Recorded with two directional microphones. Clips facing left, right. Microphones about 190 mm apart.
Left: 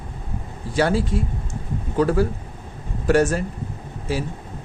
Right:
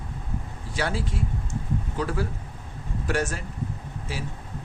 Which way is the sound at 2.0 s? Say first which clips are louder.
Left 11 dB; 45° left (ahead or behind).